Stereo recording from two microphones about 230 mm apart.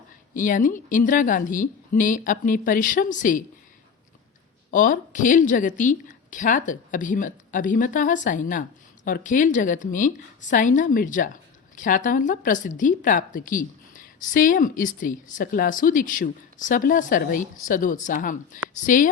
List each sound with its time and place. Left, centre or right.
0.3 s a woman's voice: left
4.7 s a woman's voice: left